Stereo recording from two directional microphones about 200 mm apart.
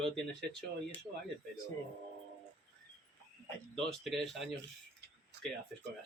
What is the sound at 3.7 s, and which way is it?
Speech, centre (ahead or behind).